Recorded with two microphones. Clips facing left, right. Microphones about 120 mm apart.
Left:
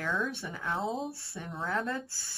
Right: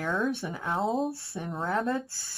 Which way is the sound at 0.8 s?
Centre (ahead or behind).